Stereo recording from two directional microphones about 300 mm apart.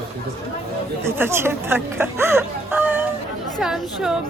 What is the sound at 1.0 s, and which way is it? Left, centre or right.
A woman's voice, centre.